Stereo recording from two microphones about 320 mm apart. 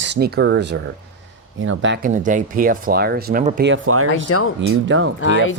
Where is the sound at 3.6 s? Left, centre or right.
Right.